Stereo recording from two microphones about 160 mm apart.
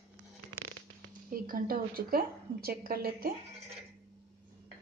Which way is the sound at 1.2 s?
60° right (ahead or behind).